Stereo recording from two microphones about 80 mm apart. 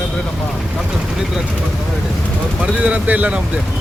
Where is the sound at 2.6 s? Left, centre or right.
Centre.